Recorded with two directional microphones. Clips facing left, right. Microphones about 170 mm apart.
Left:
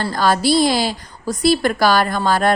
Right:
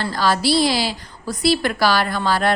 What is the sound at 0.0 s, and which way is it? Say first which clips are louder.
A woman's voice: left 2 dB; 45° left (ahead or behind).